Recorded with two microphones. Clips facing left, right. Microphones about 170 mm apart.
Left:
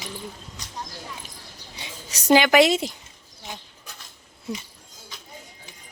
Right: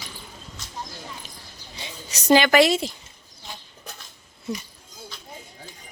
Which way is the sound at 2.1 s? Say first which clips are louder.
Even; 10° left (ahead or behind).